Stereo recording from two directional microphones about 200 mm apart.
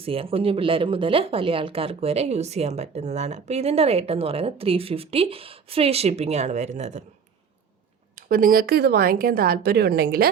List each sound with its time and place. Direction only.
0.0 s speech: 30° right (ahead or behind)
8.1 s speech: 45° right (ahead or behind)